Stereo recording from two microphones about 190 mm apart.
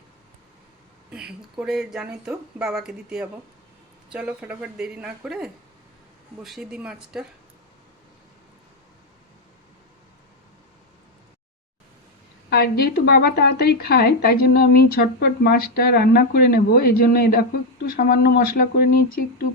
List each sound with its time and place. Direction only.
1.1 s speech: 5° right (ahead or behind)
12.5 s a woman's voice: 55° left (ahead or behind)